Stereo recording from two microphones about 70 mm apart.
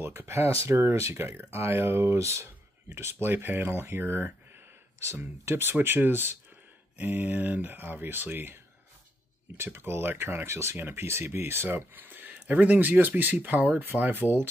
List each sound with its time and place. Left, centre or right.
0.0 s speech: right
9.6 s speech: right